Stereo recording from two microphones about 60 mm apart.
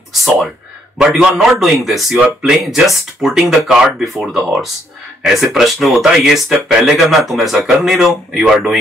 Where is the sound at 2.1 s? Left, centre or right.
Centre.